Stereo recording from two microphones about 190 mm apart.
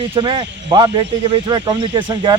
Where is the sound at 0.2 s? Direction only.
25° right (ahead or behind).